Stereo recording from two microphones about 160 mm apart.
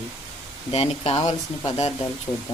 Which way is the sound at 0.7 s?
40° left (ahead or behind).